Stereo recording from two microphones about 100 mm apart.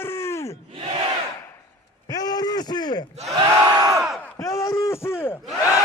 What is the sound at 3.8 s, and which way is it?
Battle cry, 40° right (ahead or behind).